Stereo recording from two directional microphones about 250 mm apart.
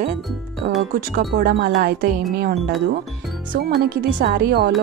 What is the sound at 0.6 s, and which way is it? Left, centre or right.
Speech, right.